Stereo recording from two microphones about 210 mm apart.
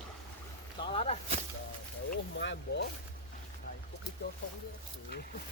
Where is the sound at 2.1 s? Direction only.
55° left (ahead or behind).